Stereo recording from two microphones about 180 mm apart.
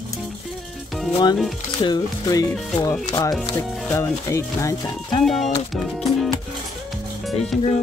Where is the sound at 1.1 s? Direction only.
25° left (ahead or behind).